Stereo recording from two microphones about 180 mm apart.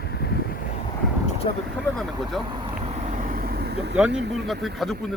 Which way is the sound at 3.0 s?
45° right (ahead or behind).